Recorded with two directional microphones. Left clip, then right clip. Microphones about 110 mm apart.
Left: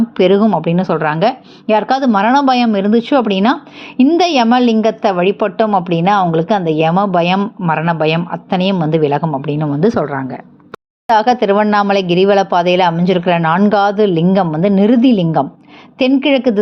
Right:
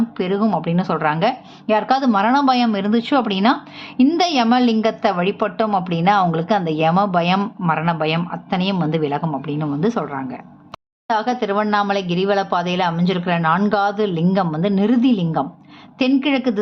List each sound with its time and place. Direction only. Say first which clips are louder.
0.2 s speech: left 13 dB; 65° left (ahead or behind)
0.6 s a woman's voice: left 5 dB; 40° left (ahead or behind)
11.1 s a woman's voice: left 8 dB; 55° left (ahead or behind)
16.0 s a woman's voice: left 6 dB; 40° left (ahead or behind)